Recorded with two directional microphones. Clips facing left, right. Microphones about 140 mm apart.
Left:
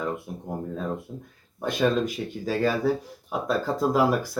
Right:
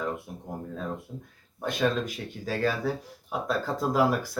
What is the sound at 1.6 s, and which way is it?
Speech, 5° left (ahead or behind).